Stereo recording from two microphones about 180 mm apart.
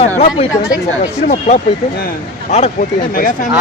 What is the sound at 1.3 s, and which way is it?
Speech, 40° left (ahead or behind).